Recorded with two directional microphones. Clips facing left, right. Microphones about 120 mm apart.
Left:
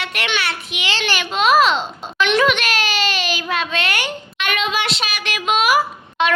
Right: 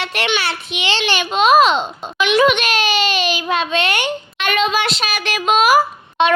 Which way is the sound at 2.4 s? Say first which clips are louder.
Right 3 dB; 20° right (ahead or behind).